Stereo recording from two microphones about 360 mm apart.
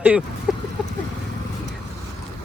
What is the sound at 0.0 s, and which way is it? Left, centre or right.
Speech, centre.